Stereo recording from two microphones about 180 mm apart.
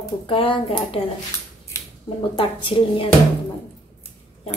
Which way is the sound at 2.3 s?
30° left (ahead or behind).